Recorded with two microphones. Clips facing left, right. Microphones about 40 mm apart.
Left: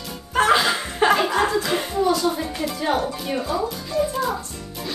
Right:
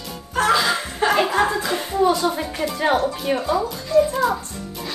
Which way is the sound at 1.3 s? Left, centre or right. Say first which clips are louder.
Right 1 dB; centre.